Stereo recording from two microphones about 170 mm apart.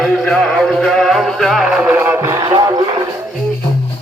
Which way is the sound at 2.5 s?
25° right (ahead or behind).